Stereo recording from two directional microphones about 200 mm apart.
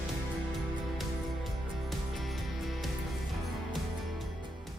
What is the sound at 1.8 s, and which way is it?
Music, centre (ahead or behind).